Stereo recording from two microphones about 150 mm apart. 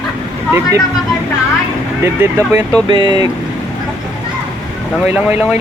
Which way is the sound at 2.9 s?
30° right (ahead or behind).